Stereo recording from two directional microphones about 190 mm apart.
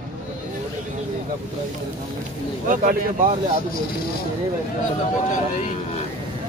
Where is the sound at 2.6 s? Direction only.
45° right (ahead or behind).